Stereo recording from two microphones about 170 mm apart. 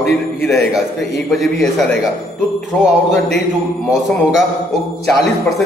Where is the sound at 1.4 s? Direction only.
Centre (ahead or behind).